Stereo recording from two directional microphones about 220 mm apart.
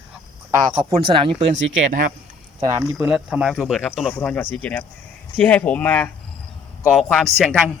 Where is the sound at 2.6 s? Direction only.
15° right (ahead or behind).